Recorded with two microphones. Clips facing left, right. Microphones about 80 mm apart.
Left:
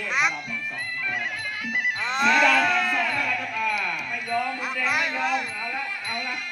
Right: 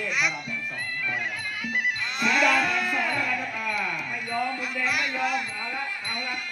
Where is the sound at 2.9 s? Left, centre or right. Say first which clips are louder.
Left 1 dB; centre.